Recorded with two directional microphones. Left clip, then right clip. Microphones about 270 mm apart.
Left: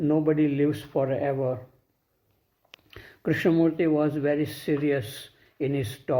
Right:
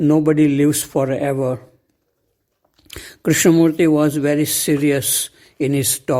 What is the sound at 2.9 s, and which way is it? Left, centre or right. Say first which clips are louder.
Speech: right 9 dB; right.